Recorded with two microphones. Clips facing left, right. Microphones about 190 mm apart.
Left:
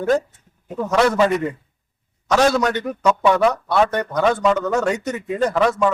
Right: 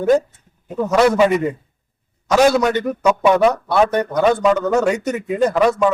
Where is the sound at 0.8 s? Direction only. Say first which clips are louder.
Right 3 dB; 10° right (ahead or behind).